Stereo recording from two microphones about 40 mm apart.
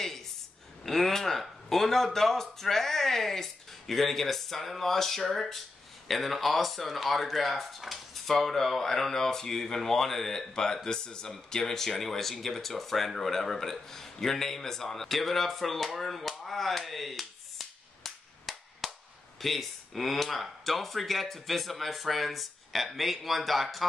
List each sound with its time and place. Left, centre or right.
0.8 s speech: centre